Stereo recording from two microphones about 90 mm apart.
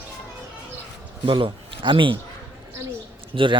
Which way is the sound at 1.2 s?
70° right (ahead or behind).